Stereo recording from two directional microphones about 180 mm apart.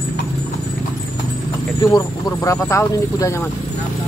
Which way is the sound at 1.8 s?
20° left (ahead or behind).